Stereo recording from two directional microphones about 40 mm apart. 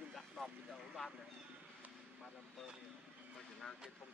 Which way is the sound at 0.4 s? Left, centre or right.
Centre.